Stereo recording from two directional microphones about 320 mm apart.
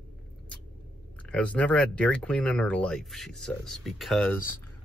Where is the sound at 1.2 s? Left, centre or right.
Centre.